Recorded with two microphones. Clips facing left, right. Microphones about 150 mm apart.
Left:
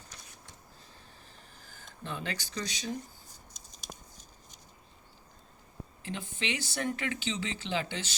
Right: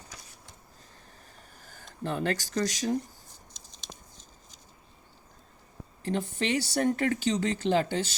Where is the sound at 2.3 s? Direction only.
55° right (ahead or behind).